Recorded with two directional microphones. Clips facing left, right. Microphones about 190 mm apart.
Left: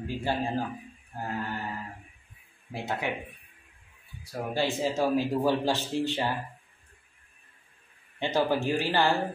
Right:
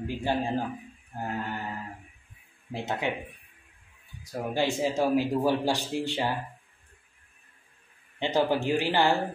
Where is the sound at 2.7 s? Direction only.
20° right (ahead or behind).